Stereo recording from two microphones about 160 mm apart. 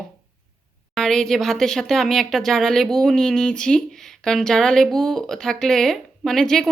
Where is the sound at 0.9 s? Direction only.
5° left (ahead or behind).